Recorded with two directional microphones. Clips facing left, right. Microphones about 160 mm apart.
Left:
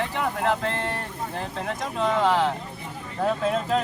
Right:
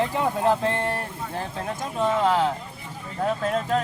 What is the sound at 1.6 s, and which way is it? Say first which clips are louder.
Speech: even; 5° right (ahead or behind).